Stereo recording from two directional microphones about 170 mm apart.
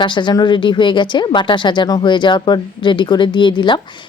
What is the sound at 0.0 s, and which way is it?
Speech, 25° left (ahead or behind).